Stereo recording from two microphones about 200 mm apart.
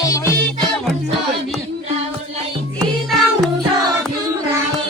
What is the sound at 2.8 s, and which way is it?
Music, centre (ahead or behind).